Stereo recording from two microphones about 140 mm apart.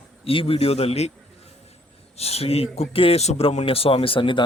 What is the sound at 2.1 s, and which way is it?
A man's voice, 45° left (ahead or behind).